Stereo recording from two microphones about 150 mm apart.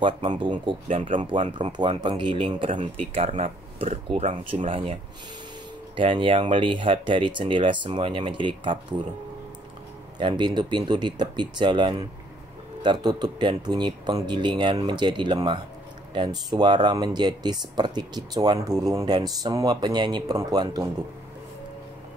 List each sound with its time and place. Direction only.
0.0 s speech: 30° right (ahead or behind)
3.2 s speech: 50° right (ahead or behind)
5.9 s speech: 35° right (ahead or behind)
10.1 s speech: 30° right (ahead or behind)